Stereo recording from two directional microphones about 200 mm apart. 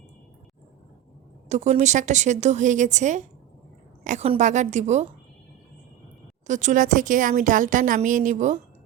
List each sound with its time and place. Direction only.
1.5 s a woman's voice: 35° right (ahead or behind)
6.5 s a woman's voice: 35° right (ahead or behind)